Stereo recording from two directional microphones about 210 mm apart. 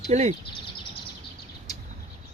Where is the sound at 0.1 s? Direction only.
30° right (ahead or behind).